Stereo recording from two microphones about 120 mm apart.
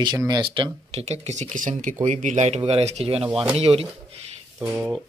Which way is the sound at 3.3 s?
5° right (ahead or behind).